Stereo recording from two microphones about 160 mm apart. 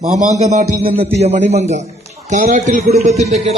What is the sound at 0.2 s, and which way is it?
A man's voice, 45° right (ahead or behind).